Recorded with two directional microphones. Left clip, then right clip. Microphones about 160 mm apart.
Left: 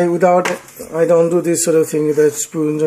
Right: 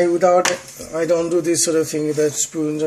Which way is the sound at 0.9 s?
45° left (ahead or behind).